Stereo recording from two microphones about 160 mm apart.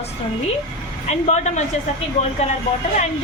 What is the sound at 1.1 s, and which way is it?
Speech, 45° left (ahead or behind).